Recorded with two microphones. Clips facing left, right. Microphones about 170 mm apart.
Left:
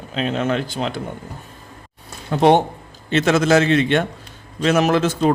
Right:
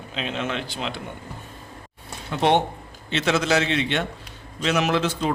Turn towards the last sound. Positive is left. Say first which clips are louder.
# left 6 dB
turn(degrees=45)  # may be behind; listen again after turning